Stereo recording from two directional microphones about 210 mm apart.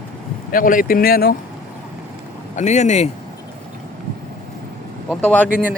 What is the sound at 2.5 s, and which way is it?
Speech, 35° left (ahead or behind).